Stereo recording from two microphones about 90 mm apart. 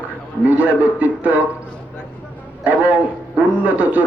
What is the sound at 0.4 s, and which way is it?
Speech, 15° right (ahead or behind).